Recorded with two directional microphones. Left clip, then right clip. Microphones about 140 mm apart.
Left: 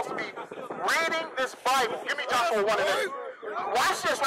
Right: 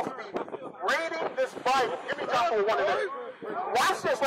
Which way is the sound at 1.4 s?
55° left (ahead or behind).